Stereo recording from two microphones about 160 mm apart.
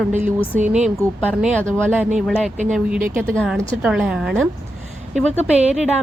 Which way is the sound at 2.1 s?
5° right (ahead or behind).